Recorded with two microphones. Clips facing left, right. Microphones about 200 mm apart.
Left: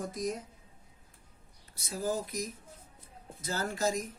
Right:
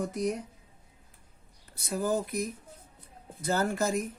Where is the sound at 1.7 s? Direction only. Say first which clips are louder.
Right 4 dB; 60° right (ahead or behind).